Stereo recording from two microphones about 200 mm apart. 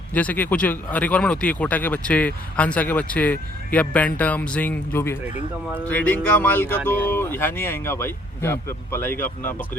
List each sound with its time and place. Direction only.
0.1 s speech: 5° left (ahead or behind)